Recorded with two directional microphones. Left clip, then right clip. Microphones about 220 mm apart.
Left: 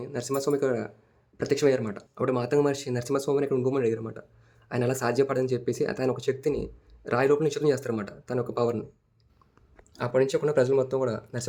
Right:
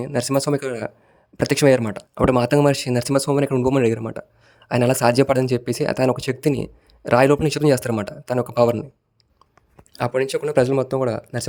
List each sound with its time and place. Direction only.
0.0 s speech: 45° right (ahead or behind)
9.9 s speech: 40° right (ahead or behind)